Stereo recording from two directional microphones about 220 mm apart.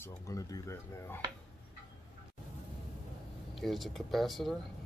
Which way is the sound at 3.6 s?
Centre (ahead or behind).